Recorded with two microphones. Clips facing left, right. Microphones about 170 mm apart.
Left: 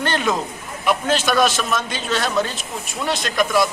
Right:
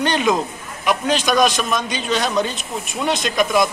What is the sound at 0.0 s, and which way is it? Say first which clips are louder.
A man's voice: right 3 dB; 15° right (ahead or behind).